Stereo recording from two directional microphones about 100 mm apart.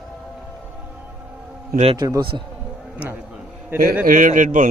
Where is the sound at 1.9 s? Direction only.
45° right (ahead or behind).